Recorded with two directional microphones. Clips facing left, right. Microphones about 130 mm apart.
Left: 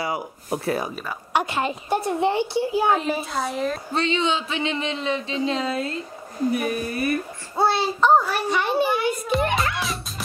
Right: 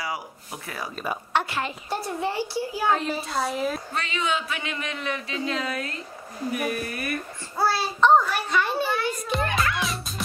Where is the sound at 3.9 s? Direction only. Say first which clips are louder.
Left 5 dB; 30° left (ahead or behind).